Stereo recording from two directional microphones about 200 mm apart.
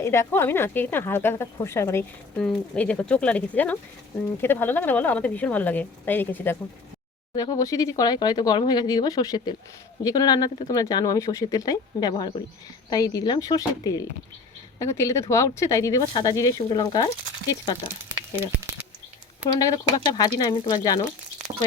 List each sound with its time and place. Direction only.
0.0 s a woman's voice: 15° left (ahead or behind)
19.5 s speech: 20° left (ahead or behind)